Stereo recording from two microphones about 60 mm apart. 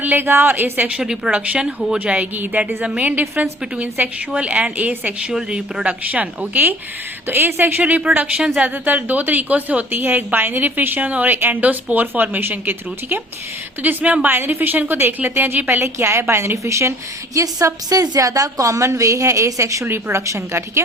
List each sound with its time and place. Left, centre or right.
0.0 s a woman's voice: right
0.9 s speech: centre
2.1 s a woman's voice: right
4.4 s speech: right
5.3 s a woman's voice: centre; by 13.2 s right
13.8 s speech: right
14.3 s a woman's voice: right
16.0 s a woman's voice: right
17.3 s a woman's voice: right
19.8 s a woman's voice: right